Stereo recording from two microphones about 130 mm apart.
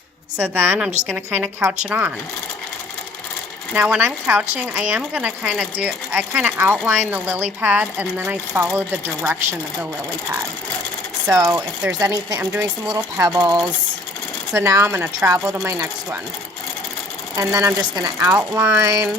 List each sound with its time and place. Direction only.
0.3 s a woman's voice: 10° right (ahead or behind)
3.8 s a woman's voice: 15° right (ahead or behind)
11.3 s speech: 25° right (ahead or behind)
11.8 s a woman's voice: 5° right (ahead or behind)
12.0 s speech: 25° right (ahead or behind)
17.3 s speech: 25° right (ahead or behind)